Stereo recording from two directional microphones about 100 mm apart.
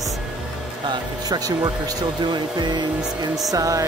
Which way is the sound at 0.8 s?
45° right (ahead or behind).